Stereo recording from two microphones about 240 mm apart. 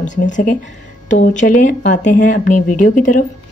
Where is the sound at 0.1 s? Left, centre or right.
Left.